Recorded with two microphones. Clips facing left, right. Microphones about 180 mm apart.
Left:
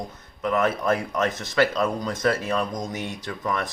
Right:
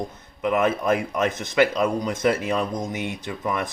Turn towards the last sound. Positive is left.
turn(degrees=-15)  # may be behind; listen again after turning